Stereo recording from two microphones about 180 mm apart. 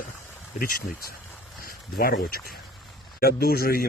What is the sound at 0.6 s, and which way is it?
Speech, 50° left (ahead or behind).